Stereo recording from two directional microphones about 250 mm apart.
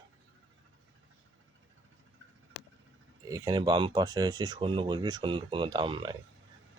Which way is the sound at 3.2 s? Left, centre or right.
Centre.